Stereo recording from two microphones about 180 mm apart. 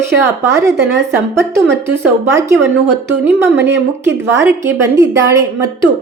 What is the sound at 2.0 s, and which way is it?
Speech, 15° right (ahead or behind).